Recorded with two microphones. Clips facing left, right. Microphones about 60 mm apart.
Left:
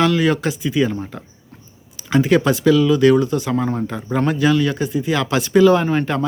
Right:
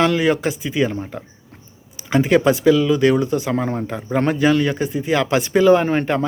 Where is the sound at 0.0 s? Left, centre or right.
Right.